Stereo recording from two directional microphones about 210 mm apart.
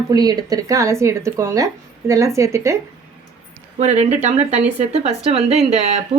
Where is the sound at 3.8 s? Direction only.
30° right (ahead or behind).